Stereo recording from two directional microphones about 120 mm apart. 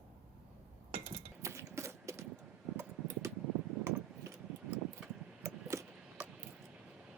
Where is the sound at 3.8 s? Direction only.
20° right (ahead or behind).